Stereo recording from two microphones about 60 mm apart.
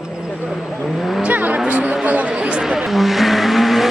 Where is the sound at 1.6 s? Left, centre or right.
Right.